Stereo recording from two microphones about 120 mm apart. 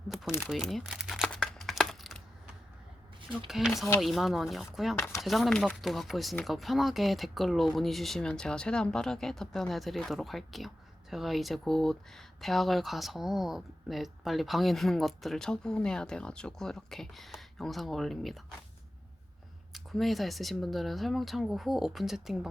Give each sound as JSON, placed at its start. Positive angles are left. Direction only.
{"t": 0.3, "sound": "speech", "side_deg": -5}
{"t": 1.3, "sound": "a sound", "side_deg": 5}
{"t": 3.3, "sound": "speech", "side_deg": -5}
{"t": 4.9, "sound": "speech", "side_deg": 20}
{"t": 5.2, "sound": "speech", "side_deg": 0}
{"t": 19.7, "sound": "speech", "side_deg": 0}